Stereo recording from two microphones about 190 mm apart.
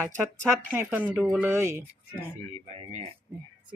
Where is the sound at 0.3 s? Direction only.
15° right (ahead or behind).